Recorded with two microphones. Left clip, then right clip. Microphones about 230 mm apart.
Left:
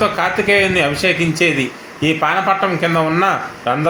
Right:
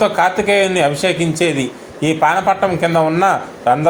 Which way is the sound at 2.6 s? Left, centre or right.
Centre.